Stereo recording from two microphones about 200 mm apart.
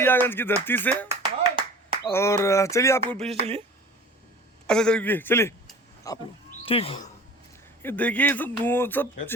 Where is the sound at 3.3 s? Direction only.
30° right (ahead or behind).